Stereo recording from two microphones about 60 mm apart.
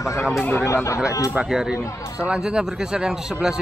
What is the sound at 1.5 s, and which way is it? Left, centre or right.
A man's voice, centre.